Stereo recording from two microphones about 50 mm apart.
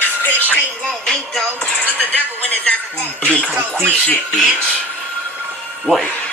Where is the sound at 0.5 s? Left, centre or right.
Left.